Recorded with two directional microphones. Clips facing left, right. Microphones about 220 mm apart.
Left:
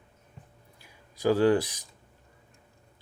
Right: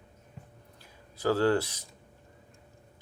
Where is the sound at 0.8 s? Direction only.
15° left (ahead or behind).